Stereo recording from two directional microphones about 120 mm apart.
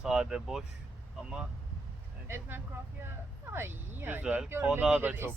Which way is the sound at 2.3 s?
20° right (ahead or behind).